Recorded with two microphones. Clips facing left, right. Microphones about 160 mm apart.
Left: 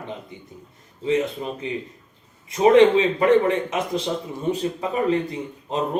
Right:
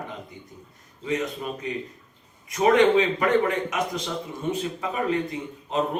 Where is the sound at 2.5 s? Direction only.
30° left (ahead or behind).